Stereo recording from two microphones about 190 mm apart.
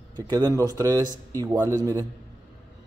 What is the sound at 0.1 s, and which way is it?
A man's voice, 20° right (ahead or behind).